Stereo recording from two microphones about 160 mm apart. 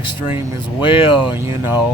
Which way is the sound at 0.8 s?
35° left (ahead or behind).